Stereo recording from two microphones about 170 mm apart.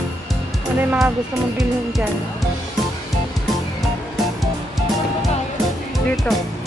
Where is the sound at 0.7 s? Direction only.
5° right (ahead or behind).